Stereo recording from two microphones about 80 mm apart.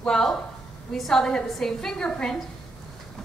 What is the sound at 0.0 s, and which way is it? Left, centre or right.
A woman's voice, centre.